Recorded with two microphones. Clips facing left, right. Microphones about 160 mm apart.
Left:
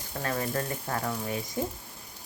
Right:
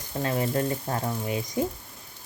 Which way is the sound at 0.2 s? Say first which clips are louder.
Right 5 dB; 20° right (ahead or behind).